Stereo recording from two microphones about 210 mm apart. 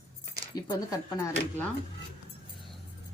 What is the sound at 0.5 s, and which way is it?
Speech, 20° left (ahead or behind).